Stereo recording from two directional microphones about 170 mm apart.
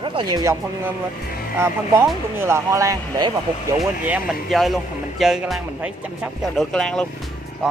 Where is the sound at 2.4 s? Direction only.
15° right (ahead or behind).